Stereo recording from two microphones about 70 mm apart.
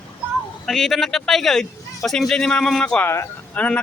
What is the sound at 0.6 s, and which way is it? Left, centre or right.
A man's voice, centre.